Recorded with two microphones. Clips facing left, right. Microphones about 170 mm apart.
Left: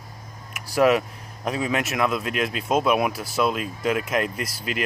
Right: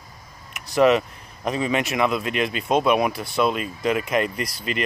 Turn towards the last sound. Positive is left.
turn(degrees=5)  # may be behind; listen again after turning